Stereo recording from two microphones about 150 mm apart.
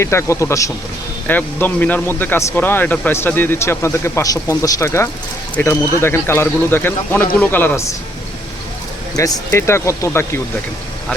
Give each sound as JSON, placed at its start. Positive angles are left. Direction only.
{"t": 0.0, "sound": "speech", "side_deg": 20}
{"t": 9.1, "sound": "speech", "side_deg": 25}